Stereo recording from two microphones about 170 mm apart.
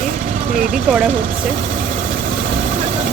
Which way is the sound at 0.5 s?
50° right (ahead or behind).